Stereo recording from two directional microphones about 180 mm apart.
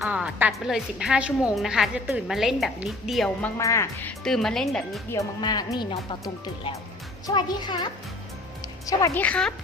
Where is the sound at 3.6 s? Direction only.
15° left (ahead or behind).